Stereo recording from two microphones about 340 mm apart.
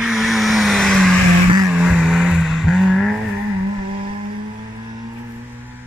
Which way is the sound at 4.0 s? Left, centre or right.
Right.